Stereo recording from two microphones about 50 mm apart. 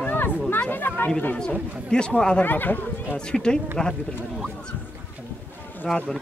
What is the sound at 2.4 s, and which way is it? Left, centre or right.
Speech, left.